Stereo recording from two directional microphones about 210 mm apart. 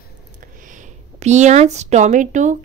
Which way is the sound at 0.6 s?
35° right (ahead or behind).